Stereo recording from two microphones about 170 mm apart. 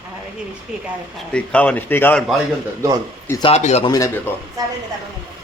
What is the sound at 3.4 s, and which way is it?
Speech, 40° left (ahead or behind).